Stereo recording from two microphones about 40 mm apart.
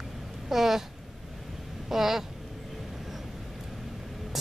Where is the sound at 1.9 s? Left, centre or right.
Centre.